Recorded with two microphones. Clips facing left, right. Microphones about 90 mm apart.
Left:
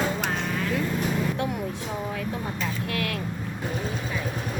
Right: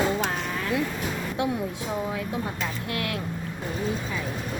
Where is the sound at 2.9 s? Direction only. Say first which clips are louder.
Even; 25° right (ahead or behind).